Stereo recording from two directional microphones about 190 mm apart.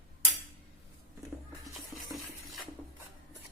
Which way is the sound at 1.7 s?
Centre (ahead or behind).